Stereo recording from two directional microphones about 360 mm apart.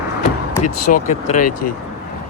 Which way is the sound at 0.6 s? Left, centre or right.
Left.